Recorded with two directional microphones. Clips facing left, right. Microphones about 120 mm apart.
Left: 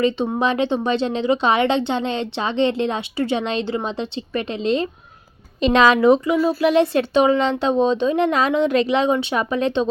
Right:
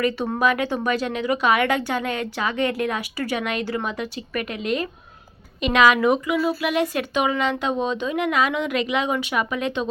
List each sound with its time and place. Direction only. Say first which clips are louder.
0.0 s speech: left 2 dB; 25° left (ahead or behind)